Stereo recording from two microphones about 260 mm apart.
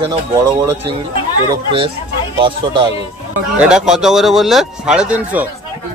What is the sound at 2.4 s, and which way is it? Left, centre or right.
Speech, centre.